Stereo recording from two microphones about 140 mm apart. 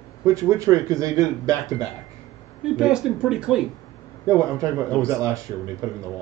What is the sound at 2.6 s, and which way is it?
Speech, 5° right (ahead or behind).